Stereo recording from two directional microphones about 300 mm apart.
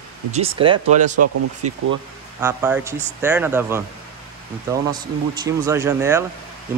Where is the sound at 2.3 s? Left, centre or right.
Centre.